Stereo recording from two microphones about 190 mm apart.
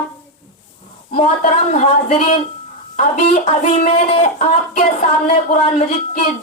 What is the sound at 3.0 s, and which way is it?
Speech, 40° left (ahead or behind).